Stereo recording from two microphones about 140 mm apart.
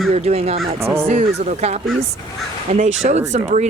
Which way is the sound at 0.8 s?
20° right (ahead or behind).